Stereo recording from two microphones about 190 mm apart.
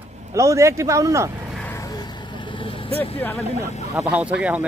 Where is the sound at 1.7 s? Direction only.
20° left (ahead or behind).